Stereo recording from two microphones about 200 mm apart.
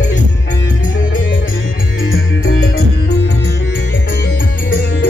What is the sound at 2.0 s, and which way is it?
Music, 85° left.